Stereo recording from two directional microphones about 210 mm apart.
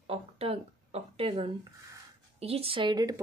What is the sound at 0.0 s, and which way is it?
Speech, 30° right (ahead or behind).